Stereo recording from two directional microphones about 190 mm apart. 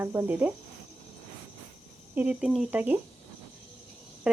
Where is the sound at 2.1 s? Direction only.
5° right (ahead or behind).